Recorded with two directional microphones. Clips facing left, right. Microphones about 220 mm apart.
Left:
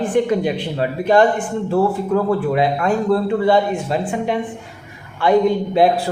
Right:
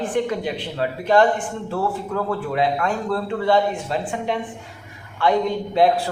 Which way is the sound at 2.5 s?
10° left (ahead or behind).